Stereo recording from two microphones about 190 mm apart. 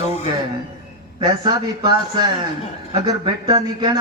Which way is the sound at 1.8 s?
20° right (ahead or behind).